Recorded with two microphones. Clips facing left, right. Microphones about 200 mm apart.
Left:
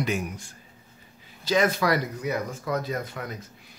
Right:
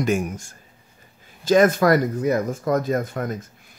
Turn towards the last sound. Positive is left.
turn(degrees=-50)  # may be behind; listen again after turning